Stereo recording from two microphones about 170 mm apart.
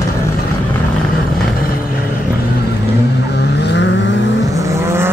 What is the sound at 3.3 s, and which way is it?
Vehicle, 80° left.